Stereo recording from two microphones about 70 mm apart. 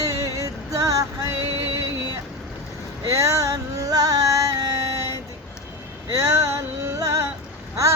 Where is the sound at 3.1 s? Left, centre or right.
Right.